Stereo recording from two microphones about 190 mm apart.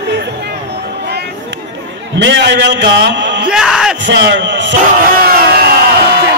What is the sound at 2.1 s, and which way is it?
A man's voice, 65° right (ahead or behind).